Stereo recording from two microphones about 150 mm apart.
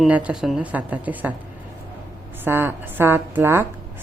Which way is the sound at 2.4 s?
15° right (ahead or behind).